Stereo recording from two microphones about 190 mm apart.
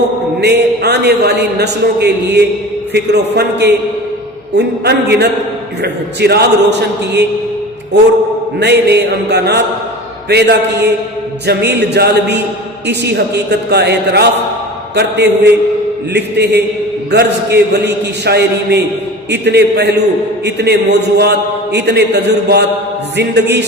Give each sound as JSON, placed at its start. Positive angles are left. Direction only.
{"t": 0.3, "sound": "a man's voice", "side_deg": -60}
{"t": 8.5, "sound": "a man's voice", "side_deg": -60}